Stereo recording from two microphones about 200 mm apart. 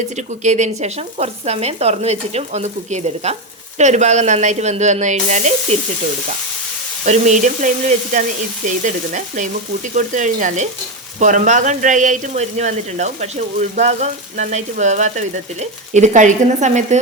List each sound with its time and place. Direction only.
0.2 s speech: 35° right (ahead or behind)
7.0 s speech: 35° right (ahead or behind)